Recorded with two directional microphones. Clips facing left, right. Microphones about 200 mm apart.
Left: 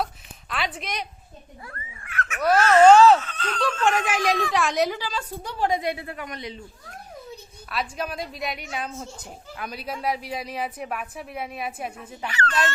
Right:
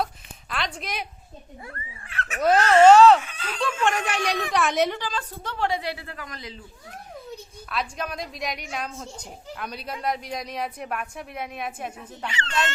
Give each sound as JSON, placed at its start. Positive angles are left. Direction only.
{"t": 0.5, "sound": "a woman's voice", "side_deg": 0}
{"t": 1.6, "sound": "speech", "side_deg": -30}
{"t": 2.4, "sound": "a sound", "side_deg": -20}
{"t": 3.2, "sound": "speech", "side_deg": -10}
{"t": 3.8, "sound": "a woman's voice", "side_deg": 5}
{"t": 7.7, "sound": "speech", "side_deg": 5}
{"t": 12.3, "sound": "a sound", "side_deg": -25}